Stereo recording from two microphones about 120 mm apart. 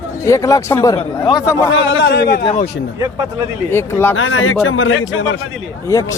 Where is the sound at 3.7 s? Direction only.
20° left (ahead or behind).